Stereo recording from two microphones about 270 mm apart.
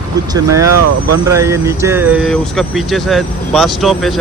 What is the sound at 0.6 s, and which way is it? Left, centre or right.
Speech, right.